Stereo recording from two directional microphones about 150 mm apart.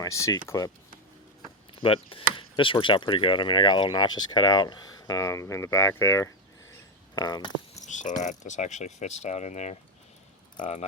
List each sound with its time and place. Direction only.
0.0 s speech: 20° left (ahead or behind)
1.7 s speech: 35° left (ahead or behind)
7.9 s speech: 55° left (ahead or behind)